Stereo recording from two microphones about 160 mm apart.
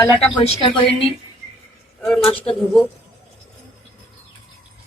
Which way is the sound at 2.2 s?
35° left (ahead or behind).